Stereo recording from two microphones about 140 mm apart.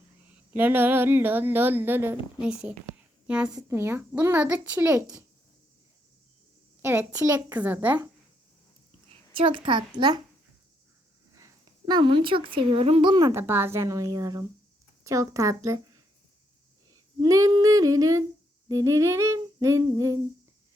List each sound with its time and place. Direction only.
0.5 s speech: 15° right (ahead or behind)
6.8 s speech: 15° right (ahead or behind)
9.3 s a child's voice: 40° right (ahead or behind)
11.3 s speech: 25° right (ahead or behind)
13.2 s speech: 15° right (ahead or behind)
17.2 s speech: 25° right (ahead or behind)